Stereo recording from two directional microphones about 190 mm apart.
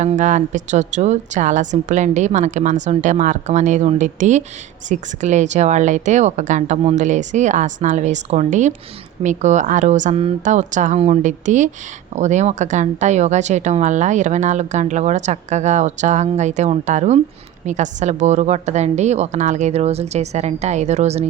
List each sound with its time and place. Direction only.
0.0 s speech: 40° right (ahead or behind)